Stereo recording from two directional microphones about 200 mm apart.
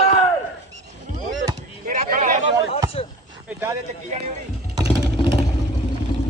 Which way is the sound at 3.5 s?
10° right (ahead or behind).